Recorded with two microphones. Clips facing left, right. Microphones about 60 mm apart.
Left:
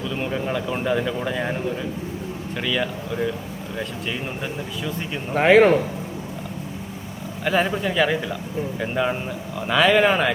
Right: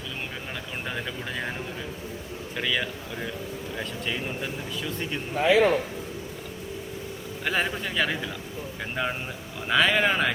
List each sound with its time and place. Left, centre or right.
0.5 s speech: centre
2.6 s speech: centre
5.3 s a man's voice: left
7.4 s speech: centre